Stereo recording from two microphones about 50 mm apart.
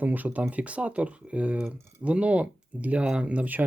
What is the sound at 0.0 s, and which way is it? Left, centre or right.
Speech, right.